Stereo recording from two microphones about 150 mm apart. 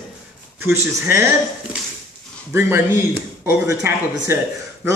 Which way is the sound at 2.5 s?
15° right (ahead or behind).